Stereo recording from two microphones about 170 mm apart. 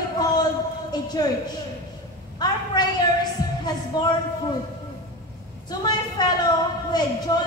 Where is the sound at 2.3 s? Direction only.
25° left (ahead or behind).